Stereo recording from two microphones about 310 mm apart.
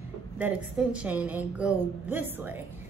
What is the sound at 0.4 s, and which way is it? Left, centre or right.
A woman's voice, centre.